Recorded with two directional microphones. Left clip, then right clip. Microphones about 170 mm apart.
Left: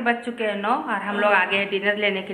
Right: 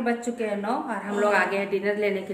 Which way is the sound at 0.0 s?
10° right (ahead or behind).